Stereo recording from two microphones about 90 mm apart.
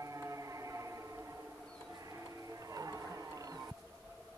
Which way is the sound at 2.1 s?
40° right (ahead or behind).